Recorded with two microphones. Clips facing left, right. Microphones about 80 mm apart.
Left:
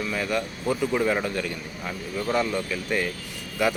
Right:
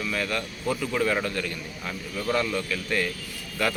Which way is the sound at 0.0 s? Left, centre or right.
Centre.